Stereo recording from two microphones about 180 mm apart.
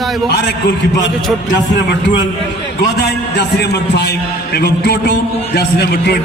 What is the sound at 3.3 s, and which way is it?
A man's voice, 70° left (ahead or behind).